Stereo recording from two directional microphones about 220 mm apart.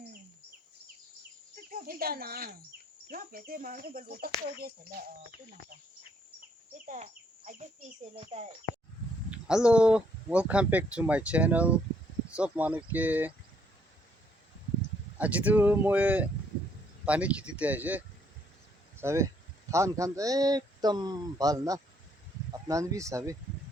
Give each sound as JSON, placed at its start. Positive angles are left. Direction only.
{"t": 1.7, "sound": "speech", "side_deg": -40}
{"t": 4.5, "sound": "a sound", "side_deg": -45}
{"t": 6.8, "sound": "a sound", "side_deg": -35}
{"t": 8.1, "sound": "speech", "side_deg": -30}
{"t": 9.3, "sound": "speech", "side_deg": -5}
{"t": 15.2, "sound": "speech", "side_deg": -5}